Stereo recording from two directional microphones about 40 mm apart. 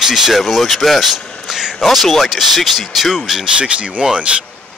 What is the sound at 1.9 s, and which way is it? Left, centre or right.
Speech, centre.